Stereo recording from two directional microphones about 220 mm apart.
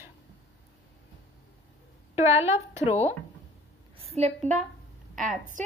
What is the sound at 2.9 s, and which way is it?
Speech, 30° left (ahead or behind).